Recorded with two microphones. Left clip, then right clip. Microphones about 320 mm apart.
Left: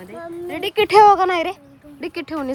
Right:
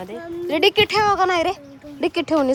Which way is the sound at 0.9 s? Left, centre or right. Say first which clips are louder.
Left 8 dB; centre.